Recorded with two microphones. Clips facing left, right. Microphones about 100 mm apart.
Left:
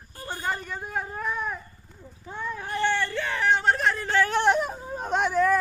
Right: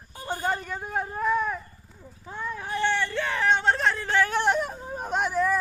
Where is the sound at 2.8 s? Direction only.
15° right (ahead or behind).